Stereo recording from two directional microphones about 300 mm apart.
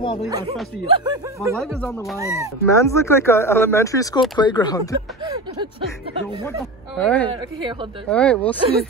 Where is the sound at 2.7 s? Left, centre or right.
Centre.